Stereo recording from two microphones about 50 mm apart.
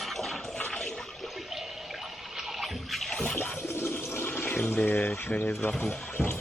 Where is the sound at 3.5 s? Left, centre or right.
Left.